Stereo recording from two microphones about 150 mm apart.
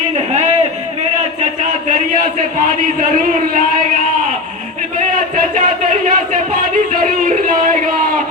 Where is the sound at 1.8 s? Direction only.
60° right (ahead or behind).